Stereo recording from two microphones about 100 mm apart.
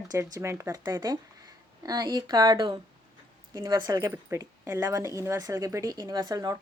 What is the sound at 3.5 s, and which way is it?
Speech, 35° right (ahead or behind).